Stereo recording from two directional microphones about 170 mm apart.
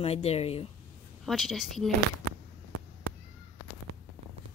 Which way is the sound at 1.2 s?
Centre (ahead or behind).